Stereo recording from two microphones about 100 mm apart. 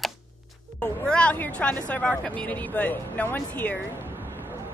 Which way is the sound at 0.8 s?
10° left (ahead or behind).